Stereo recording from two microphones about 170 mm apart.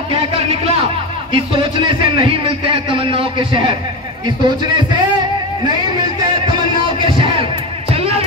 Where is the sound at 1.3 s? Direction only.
30° right (ahead or behind).